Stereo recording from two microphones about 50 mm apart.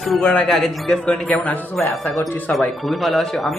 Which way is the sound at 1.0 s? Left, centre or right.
Left.